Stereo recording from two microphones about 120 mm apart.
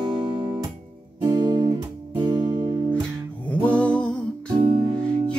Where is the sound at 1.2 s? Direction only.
35° right (ahead or behind).